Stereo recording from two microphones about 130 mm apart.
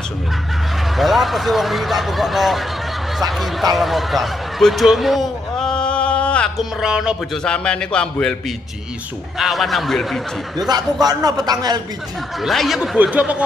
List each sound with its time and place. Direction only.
0.9 s speech: centre (ahead or behind)
3.7 s a sound: centre (ahead or behind)
6.8 s speech: 5° right (ahead or behind)
7.4 s a man's voice: 5° left (ahead or behind)
10.7 s speech: 30° right (ahead or behind)
12.4 s speech: centre (ahead or behind)